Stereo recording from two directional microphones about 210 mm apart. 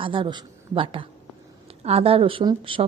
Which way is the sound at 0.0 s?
25° right (ahead or behind).